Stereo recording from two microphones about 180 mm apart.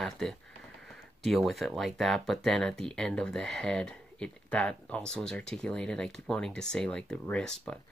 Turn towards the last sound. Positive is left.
turn(degrees=5)  # may be behind; listen again after turning